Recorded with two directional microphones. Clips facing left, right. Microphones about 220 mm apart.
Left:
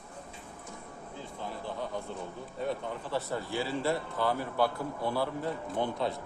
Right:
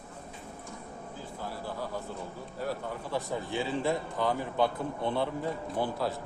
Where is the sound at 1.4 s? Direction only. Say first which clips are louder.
Even; 5° right (ahead or behind).